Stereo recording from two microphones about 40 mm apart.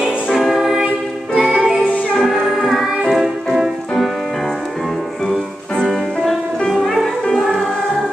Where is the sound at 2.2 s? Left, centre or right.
Centre.